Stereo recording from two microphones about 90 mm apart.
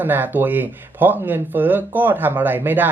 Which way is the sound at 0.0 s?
20° right (ahead or behind).